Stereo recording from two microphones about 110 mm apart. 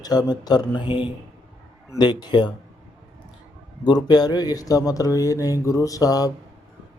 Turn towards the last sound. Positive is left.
turn(degrees=35)  # may be behind; listen again after turning